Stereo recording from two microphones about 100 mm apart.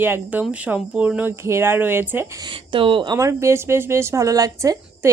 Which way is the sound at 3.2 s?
30° right (ahead or behind).